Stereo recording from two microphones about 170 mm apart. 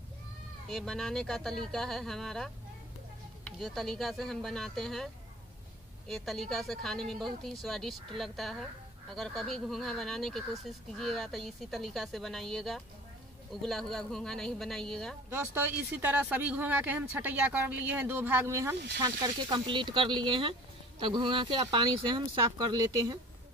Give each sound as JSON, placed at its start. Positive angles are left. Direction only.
{"t": 0.7, "sound": "speech", "side_deg": 0}
{"t": 3.5, "sound": "speech", "side_deg": 0}
{"t": 15.2, "sound": "speech", "side_deg": -10}